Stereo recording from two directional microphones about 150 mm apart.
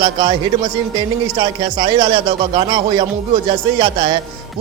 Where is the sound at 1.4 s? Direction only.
30° right (ahead or behind).